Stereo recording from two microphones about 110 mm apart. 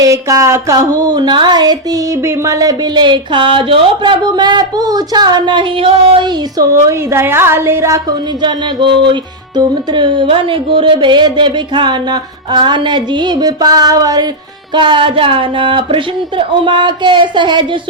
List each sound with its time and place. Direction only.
0.0 s speech: 30° right (ahead or behind)
2.2 s speech: 25° right (ahead or behind)
7.1 s a woman's voice: 20° right (ahead or behind)
8.4 s music: 45° right (ahead or behind)
14.7 s music: 45° right (ahead or behind)